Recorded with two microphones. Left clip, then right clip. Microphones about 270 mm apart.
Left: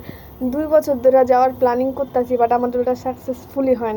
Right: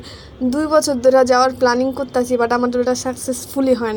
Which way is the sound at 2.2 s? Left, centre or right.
Right.